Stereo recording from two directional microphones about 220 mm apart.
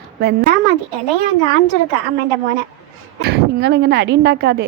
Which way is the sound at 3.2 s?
50° right (ahead or behind).